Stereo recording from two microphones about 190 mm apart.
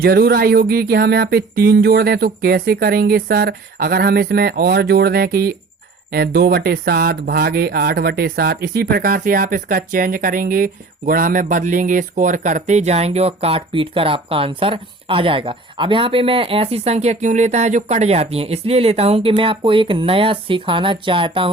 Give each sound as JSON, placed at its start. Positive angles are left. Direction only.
{"t": 0.0, "sound": "speech", "side_deg": -55}